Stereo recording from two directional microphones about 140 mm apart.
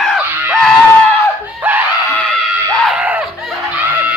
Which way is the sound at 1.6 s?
15° right (ahead or behind).